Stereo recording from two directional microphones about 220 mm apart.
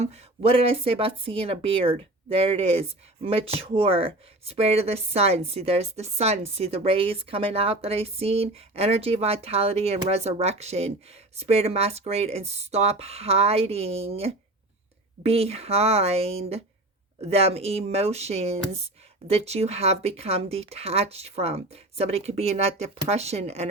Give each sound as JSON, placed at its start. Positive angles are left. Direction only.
{"t": 0.0, "sound": "speech", "side_deg": -25}